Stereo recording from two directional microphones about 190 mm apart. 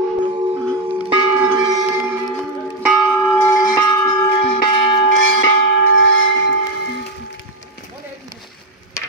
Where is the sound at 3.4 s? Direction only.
20° left (ahead or behind).